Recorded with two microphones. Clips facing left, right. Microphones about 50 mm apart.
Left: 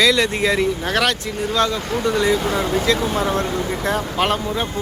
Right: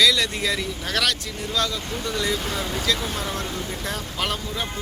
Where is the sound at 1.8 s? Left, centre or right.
Left.